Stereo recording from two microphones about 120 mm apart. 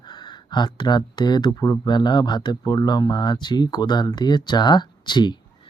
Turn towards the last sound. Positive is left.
turn(degrees=40)  # may be behind; listen again after turning